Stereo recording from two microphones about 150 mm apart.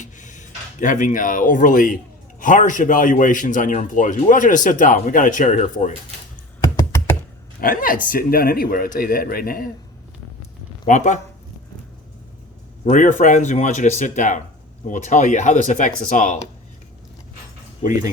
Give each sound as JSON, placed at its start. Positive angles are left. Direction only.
{"t": 0.0, "sound": "a sound", "side_deg": 55}
{"t": 2.4, "sound": "a man's voice", "side_deg": 60}
{"t": 6.6, "sound": "computer keyboard", "side_deg": 20}
{"t": 7.6, "sound": "speech", "side_deg": 70}
{"t": 10.8, "sound": "speech", "side_deg": 55}
{"t": 12.8, "sound": "a man's voice", "side_deg": 55}